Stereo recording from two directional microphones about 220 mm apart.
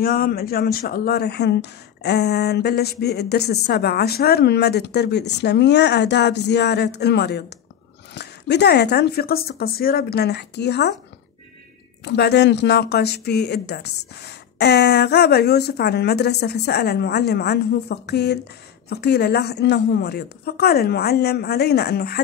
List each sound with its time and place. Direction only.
0.0 s speech: 40° left (ahead or behind)
12.0 s speech: 50° left (ahead or behind)